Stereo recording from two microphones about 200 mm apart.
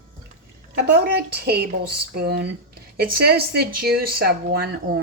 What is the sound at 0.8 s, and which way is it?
Speech, 55° right (ahead or behind).